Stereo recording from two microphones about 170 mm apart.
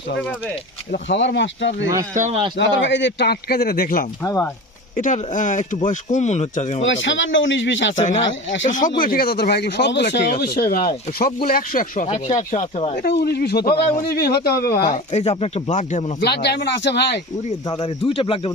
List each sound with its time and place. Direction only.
0.2 s speech: 10° left (ahead or behind)
1.0 s speech: 90° left
2.1 s speech: 45° right (ahead or behind)
2.6 s speech: 90° left; by 4.0 s 60° left (ahead or behind)
4.2 s speech: 15° left (ahead or behind)
4.9 s speech: 50° left (ahead or behind)
6.8 s speech: 90° left
7.9 s speech: 45° left (ahead or behind)
12.0 s speech: 40° left (ahead or behind)
13.0 s speech: 70° left (ahead or behind)
14.9 s speech: 40° left (ahead or behind)
16.2 s speech: 80° left
17.7 s speech: 35° left (ahead or behind)